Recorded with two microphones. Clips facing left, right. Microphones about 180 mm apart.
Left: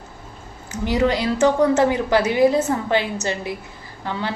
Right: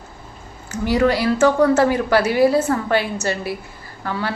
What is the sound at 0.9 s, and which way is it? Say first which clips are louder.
A woman's voice: right 2 dB; 20° left (ahead or behind).